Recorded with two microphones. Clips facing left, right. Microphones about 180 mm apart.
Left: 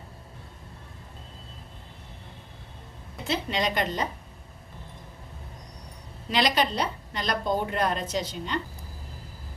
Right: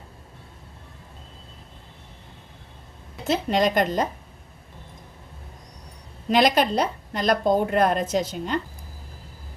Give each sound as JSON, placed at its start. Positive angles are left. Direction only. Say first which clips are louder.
{"t": 3.2, "sound": "a woman's voice", "louder": "right 6 dB", "side_deg": -45}
{"t": 6.3, "sound": "a woman's voice", "louder": "right 6 dB", "side_deg": -50}